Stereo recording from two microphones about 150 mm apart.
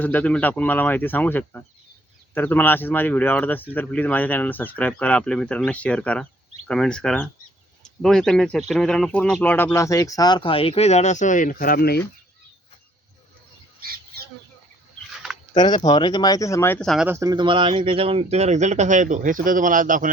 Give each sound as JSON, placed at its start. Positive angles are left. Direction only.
{"t": 0.0, "sound": "speech", "side_deg": 10}
{"t": 15.5, "sound": "speech", "side_deg": 30}
{"t": 16.8, "sound": "speech", "side_deg": 0}
{"t": 17.1, "sound": "a man's voice", "side_deg": -20}